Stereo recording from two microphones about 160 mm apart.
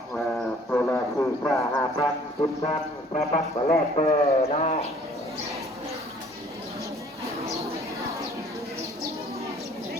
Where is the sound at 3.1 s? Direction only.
45° left (ahead or behind).